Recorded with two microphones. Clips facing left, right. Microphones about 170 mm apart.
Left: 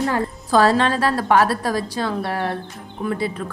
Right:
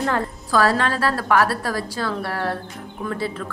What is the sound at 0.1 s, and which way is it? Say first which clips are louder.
A woman's voice: left 3 dB; 20° left (ahead or behind).